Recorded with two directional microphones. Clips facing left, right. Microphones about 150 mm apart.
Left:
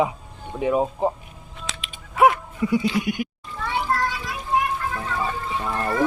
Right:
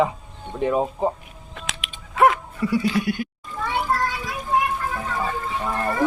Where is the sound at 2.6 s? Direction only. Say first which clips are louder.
Left 1 dB; 20° left (ahead or behind).